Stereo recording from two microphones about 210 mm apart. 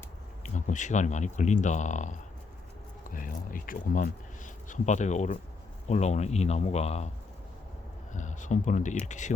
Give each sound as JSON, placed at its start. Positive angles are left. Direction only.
{"t": 0.4, "sound": "speech", "side_deg": 35}
{"t": 8.1, "sound": "speech", "side_deg": 35}